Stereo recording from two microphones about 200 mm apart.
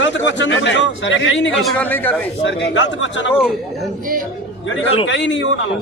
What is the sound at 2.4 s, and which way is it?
Speech, 65° left (ahead or behind).